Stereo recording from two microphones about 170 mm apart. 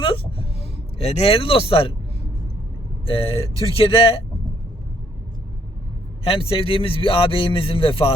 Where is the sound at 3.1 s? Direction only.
35° left (ahead or behind).